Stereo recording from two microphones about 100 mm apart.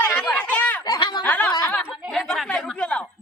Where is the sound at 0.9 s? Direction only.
50° left (ahead or behind).